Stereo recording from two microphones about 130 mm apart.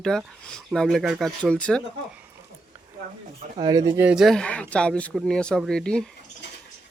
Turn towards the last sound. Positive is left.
turn(degrees=5)  # may be behind; listen again after turning